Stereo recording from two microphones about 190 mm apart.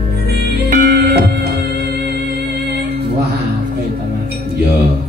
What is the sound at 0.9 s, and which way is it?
Music, 60° right (ahead or behind).